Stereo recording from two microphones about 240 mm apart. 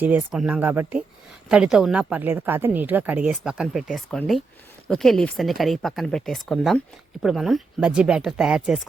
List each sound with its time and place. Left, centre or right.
0.0 s a woman's voice: centre